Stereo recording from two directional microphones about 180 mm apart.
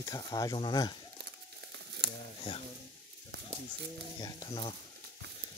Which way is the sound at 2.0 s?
65° right (ahead or behind).